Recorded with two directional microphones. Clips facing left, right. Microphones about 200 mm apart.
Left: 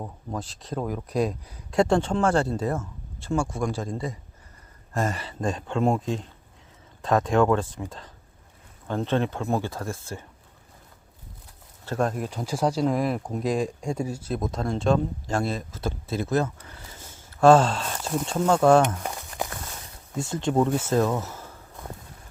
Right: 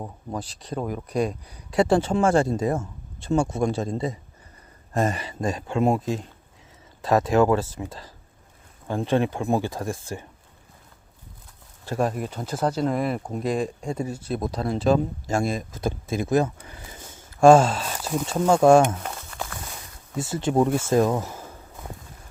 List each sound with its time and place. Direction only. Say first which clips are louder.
0.0 s speech: right 1 dB; 5° right (ahead or behind)
11.9 s speech: right 1 dB; 5° right (ahead or behind)
19.0 s crumpling: left 2 dB; 15° left (ahead or behind)
20.1 s speech: right 2 dB; 5° right (ahead or behind)